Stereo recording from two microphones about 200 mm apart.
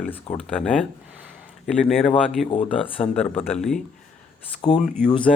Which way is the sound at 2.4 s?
25° left (ahead or behind).